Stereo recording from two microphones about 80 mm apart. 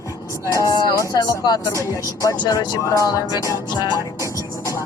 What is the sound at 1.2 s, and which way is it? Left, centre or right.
Speech, left.